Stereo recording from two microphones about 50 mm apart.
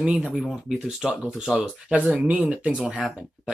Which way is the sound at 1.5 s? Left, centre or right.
Centre.